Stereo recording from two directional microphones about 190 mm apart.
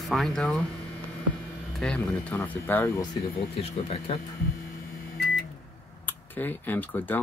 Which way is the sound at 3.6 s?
30° left (ahead or behind).